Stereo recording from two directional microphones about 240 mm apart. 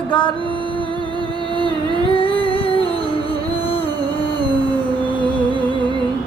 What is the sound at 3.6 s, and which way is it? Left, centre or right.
Music, left.